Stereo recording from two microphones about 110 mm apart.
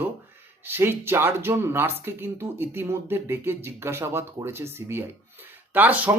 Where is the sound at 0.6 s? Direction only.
20° right (ahead or behind).